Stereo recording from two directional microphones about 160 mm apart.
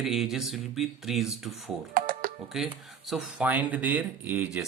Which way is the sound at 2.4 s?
Centre (ahead or behind).